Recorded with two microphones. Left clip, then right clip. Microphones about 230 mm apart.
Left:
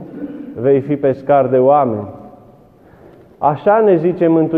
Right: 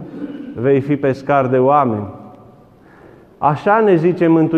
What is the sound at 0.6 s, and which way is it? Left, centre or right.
A man's voice, right.